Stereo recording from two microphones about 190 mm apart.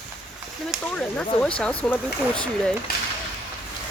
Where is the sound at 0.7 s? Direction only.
5° left (ahead or behind).